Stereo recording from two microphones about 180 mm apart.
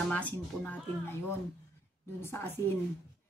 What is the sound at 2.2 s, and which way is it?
Speech, 10° left (ahead or behind).